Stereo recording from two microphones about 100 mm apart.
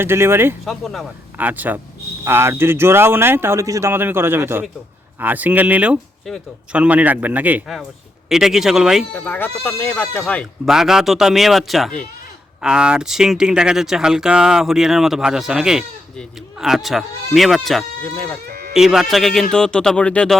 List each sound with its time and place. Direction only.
0.0 s speech: 25° right (ahead or behind)
0.6 s speech: centre (ahead or behind)
1.4 s a man's voice: 15° right (ahead or behind)
8.3 s speech: 5° right (ahead or behind)
9.1 s speech: 15° left (ahead or behind)
10.7 s speech: 5° right (ahead or behind)
18.0 s speech: 20° left (ahead or behind)
18.7 s speech: 5° right (ahead or behind); by 20.3 s 10° left (ahead or behind)